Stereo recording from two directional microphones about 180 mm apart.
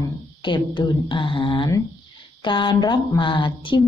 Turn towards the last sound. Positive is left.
turn(degrees=25)  # may be behind; listen again after turning